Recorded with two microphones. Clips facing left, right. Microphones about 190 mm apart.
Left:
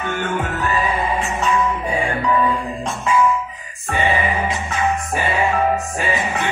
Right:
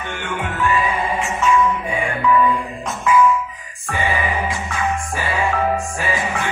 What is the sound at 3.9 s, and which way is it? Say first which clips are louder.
Music: left 2 dB; 25° left (ahead or behind).